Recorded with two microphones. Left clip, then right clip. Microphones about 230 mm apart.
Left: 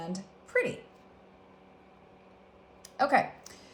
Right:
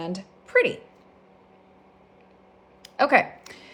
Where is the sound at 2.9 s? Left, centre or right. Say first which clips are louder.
Right 7 dB; right.